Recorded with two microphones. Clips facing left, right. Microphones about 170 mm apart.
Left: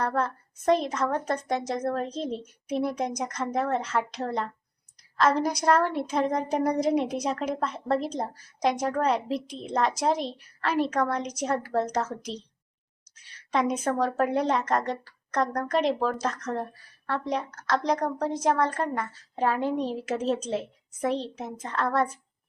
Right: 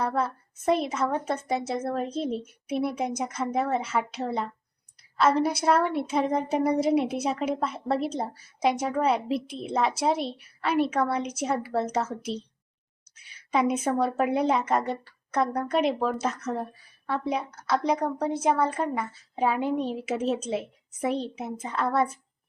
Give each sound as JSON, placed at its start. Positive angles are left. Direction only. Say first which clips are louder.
{"t": 0.0, "sound": "a woman's voice", "louder": "even", "side_deg": -10}